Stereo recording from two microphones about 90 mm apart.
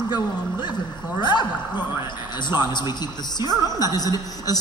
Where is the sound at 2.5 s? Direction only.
55° left (ahead or behind).